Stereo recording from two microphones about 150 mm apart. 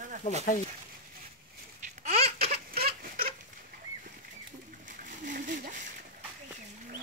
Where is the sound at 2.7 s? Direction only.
85° right.